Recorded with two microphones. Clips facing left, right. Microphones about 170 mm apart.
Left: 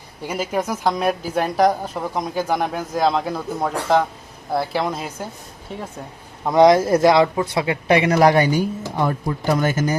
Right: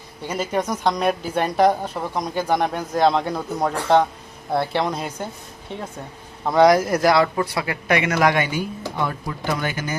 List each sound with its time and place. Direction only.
0.3 s speech: 10° left (ahead or behind)
6.4 s a man's voice: 15° left (ahead or behind); by 10.0 s 40° left (ahead or behind)